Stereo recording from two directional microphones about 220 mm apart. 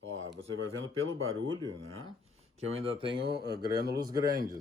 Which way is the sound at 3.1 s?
50° right (ahead or behind).